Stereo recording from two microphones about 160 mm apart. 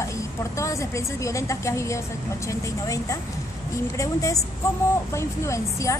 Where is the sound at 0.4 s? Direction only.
20° left (ahead or behind).